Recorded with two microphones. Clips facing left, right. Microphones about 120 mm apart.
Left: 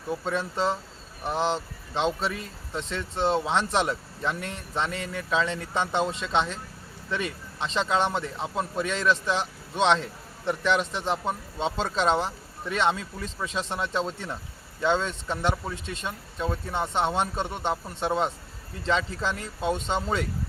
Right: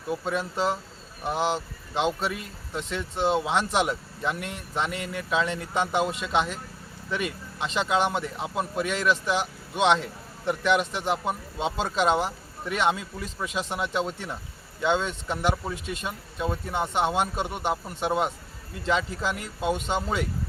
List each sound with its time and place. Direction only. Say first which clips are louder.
0.1 s a man's voice: even; 10° right (ahead or behind)
19.6 s speech: right 1 dB; 30° left (ahead or behind)
19.9 s speech: even; 5° right (ahead or behind)